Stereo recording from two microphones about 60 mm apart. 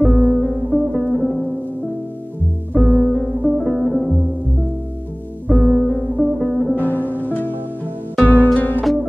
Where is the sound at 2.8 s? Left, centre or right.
Centre.